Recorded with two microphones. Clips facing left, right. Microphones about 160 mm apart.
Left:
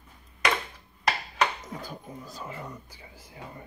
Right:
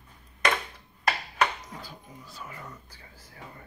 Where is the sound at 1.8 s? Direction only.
45° left (ahead or behind).